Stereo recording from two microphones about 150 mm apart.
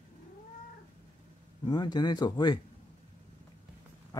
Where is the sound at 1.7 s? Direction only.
25° left (ahead or behind).